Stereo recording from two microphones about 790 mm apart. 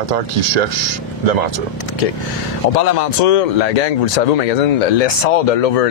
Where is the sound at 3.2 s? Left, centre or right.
Left.